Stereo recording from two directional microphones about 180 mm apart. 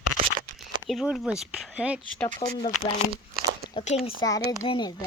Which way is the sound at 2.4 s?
30° left (ahead or behind).